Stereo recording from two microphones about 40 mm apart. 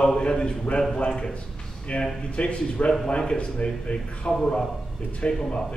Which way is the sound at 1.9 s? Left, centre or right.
Left.